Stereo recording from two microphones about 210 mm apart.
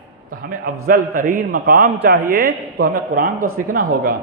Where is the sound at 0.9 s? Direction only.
45° right (ahead or behind).